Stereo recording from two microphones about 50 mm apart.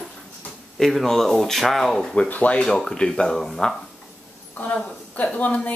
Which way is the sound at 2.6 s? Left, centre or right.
Centre.